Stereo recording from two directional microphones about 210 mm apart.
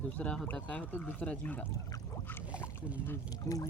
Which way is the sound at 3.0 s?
15° left (ahead or behind).